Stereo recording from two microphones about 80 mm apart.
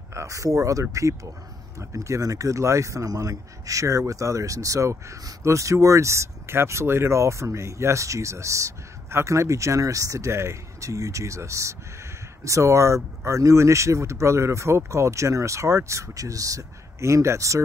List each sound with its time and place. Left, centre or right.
0.1 s speech: right